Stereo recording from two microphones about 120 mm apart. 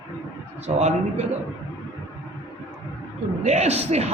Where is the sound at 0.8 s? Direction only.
65° right (ahead or behind).